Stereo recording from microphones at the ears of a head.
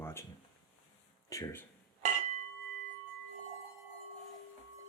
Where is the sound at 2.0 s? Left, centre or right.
Right.